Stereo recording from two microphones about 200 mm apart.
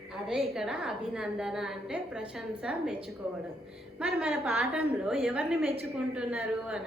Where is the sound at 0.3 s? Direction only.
Centre (ahead or behind).